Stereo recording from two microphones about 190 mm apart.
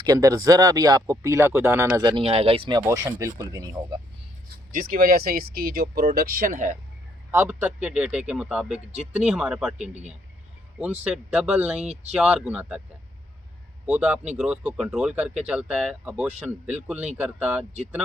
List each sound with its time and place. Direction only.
0.0 s speech: 20° right (ahead or behind)
4.7 s speech: 50° right (ahead or behind)
7.3 s speech: 15° right (ahead or behind)
8.9 s speech: 35° right (ahead or behind)
9.2 s speech: centre (ahead or behind)
10.8 s speech: 5° right (ahead or behind)
13.8 s speech: 10° right (ahead or behind)